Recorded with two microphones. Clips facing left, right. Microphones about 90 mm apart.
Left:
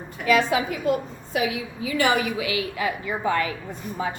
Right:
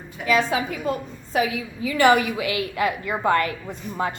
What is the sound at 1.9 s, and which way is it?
A woman's voice, 50° right (ahead or behind).